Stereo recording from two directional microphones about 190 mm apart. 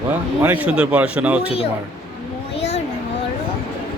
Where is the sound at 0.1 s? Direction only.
10° right (ahead or behind).